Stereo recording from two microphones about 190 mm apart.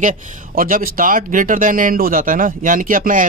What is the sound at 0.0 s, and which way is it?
Speech, 40° right (ahead or behind).